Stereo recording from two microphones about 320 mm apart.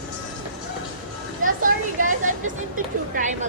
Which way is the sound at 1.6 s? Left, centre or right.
Right.